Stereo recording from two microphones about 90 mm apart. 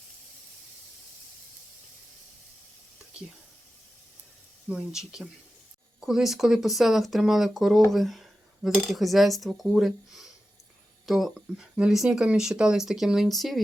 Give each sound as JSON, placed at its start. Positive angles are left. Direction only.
{"t": 4.7, "sound": "speech", "side_deg": -5}